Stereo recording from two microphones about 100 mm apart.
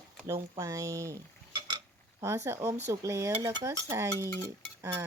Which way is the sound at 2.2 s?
30° right (ahead or behind).